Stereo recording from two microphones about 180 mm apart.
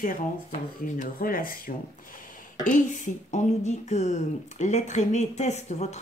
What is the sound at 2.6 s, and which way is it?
Speech, 45° left (ahead or behind).